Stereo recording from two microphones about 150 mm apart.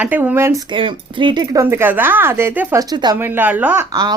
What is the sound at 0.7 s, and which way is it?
Speech, 35° right (ahead or behind).